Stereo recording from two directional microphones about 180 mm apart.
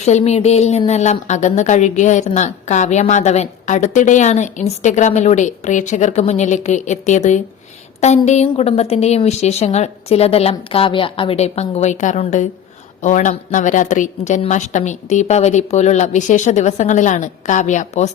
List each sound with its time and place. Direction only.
0.0 s a woman's voice: 40° left (ahead or behind)